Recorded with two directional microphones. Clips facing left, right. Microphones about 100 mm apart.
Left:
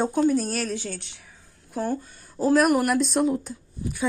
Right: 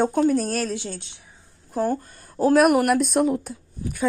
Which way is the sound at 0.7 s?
20° right (ahead or behind).